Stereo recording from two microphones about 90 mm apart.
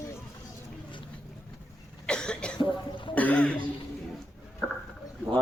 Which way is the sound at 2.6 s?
70° left (ahead or behind).